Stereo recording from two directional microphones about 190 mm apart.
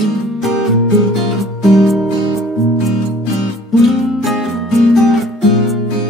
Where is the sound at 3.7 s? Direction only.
Centre (ahead or behind).